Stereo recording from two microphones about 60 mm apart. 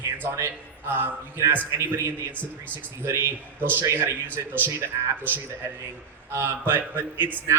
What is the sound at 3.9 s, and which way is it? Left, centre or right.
Speech, right.